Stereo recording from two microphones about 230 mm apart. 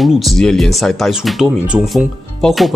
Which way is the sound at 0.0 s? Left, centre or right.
Centre.